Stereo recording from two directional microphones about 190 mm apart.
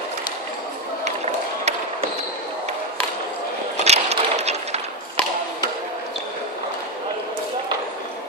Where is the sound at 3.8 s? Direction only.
35° right (ahead or behind).